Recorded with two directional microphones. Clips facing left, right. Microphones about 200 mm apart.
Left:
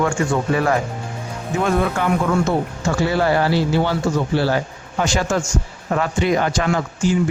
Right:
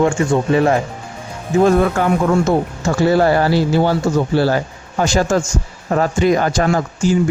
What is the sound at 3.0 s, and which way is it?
Speech, 40° right (ahead or behind).